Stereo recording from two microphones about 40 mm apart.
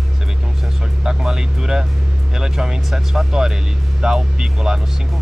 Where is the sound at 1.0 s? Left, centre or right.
Centre.